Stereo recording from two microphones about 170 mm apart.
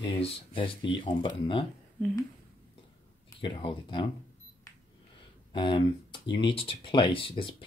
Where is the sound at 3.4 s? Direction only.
30° left (ahead or behind).